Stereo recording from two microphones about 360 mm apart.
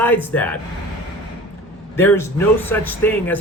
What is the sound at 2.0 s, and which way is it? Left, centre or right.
Speech, centre.